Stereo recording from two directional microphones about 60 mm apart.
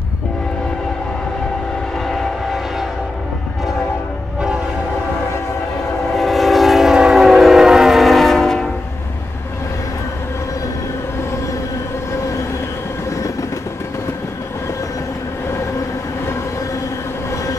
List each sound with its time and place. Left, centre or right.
2.0 s vehicle: centre
6.1 s train: centre
13.1 s train: left